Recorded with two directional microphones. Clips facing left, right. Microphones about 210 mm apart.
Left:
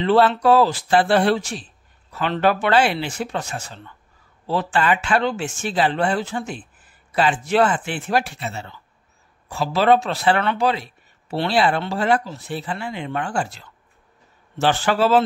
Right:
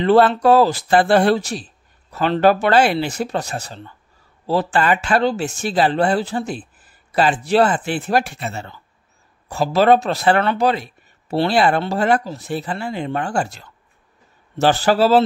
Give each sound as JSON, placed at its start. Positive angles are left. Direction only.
{"t": 0.0, "sound": "speech", "side_deg": -45}